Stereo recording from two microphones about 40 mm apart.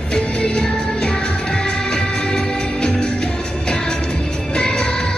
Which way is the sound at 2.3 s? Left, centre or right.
Left.